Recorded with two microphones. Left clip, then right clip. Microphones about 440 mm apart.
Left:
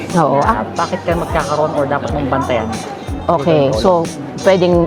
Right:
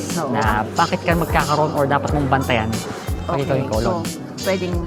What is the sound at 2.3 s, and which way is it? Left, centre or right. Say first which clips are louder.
Speech: left 3 dB; right.